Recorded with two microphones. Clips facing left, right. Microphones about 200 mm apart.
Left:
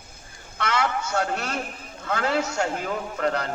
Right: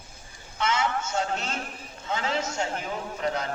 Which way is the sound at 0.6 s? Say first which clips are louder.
Left 1 dB; 65° left (ahead or behind).